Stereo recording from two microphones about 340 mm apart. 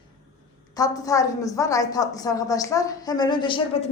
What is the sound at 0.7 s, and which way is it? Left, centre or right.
A woman's voice, centre.